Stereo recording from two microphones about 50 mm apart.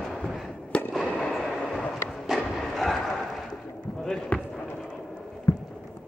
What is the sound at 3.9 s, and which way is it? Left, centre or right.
Basketball bounce, centre.